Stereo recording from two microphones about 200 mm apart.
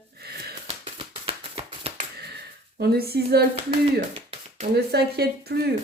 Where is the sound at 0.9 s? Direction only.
25° right (ahead or behind).